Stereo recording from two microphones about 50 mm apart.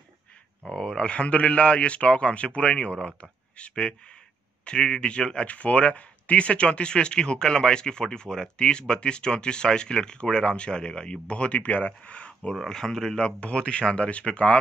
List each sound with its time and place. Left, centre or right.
0.7 s speech: centre
12.6 s speech: centre; by 14.6 s left